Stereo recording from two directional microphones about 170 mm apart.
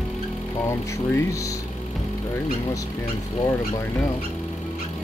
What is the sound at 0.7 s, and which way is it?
Speech, 15° left (ahead or behind).